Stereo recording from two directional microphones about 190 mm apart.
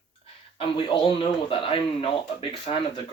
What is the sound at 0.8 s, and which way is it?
Speech, 25° left (ahead or behind).